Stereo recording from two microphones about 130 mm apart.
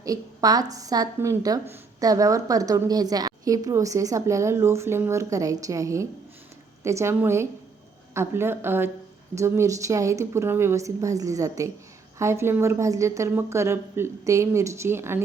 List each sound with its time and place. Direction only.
0.0 s a woman's voice: 30° right (ahead or behind)